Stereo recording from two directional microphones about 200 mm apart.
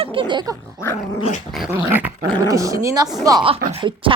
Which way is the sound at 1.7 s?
10° right (ahead or behind).